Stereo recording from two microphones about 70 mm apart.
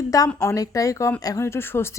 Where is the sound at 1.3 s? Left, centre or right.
Left.